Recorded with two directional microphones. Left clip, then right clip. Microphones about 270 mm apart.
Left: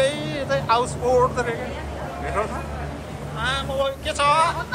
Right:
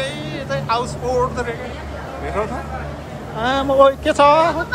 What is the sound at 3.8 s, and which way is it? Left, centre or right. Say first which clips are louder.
Speech: right 11 dB; right.